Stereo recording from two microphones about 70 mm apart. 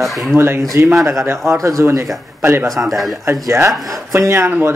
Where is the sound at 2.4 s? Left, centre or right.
Right.